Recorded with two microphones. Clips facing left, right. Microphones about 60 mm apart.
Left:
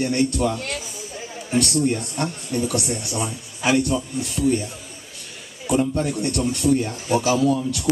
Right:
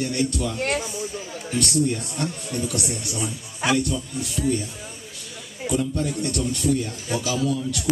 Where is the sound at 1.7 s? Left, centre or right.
Left.